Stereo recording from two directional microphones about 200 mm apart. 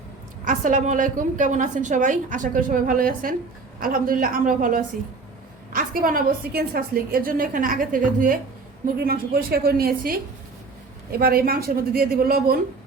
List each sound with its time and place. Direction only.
0.4 s a woman's voice: 40° right (ahead or behind)